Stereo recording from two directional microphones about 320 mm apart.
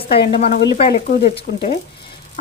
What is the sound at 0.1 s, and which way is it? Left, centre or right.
A woman's voice, centre.